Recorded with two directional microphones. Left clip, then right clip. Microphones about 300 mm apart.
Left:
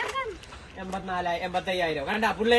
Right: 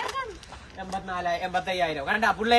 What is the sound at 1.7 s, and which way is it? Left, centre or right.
Speech, centre.